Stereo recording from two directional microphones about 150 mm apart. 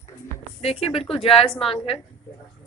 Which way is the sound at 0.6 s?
40° left (ahead or behind).